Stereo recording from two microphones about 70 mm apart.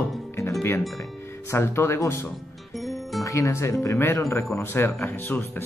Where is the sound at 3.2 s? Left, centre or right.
Left.